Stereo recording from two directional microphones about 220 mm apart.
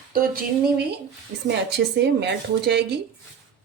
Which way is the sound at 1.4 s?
50° right (ahead or behind).